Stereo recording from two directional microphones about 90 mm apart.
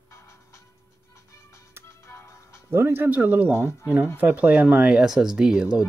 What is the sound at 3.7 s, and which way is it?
Speech, 30° left (ahead or behind).